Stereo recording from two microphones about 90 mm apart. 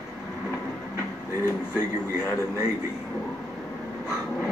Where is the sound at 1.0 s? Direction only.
30° left (ahead or behind).